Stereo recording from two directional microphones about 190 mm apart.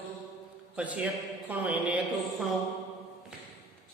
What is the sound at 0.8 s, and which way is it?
A man's voice, 10° right (ahead or behind).